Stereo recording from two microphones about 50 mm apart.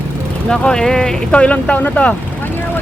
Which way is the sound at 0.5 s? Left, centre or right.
Centre.